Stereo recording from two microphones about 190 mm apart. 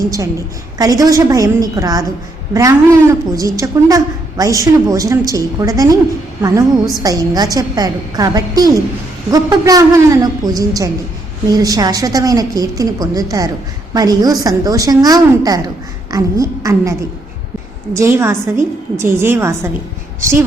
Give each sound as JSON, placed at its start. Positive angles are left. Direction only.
{"t": 0.1, "sound": "a woman's voice", "side_deg": -15}
{"t": 17.9, "sound": "a woman's voice", "side_deg": -15}